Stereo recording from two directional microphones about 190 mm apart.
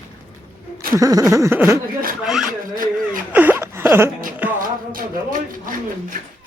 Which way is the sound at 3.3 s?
10° right (ahead or behind).